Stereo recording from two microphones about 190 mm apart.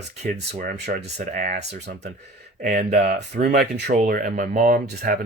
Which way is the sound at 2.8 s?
60° right (ahead or behind).